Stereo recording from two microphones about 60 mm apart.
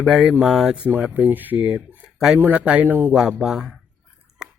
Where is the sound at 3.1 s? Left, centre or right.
Centre.